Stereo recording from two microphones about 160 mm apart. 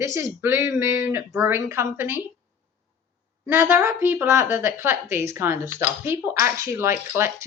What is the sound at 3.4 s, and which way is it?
Speech, 15° right (ahead or behind).